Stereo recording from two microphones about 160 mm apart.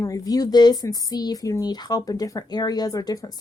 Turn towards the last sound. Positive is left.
turn(degrees=25)  # may be behind; listen again after turning